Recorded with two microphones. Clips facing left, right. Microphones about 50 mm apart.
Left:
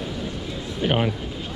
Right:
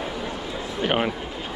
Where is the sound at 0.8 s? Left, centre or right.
Centre.